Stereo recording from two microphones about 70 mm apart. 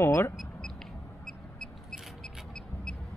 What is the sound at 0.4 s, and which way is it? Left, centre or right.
Vehicle, centre.